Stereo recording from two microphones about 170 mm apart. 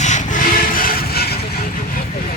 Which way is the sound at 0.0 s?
45° left (ahead or behind).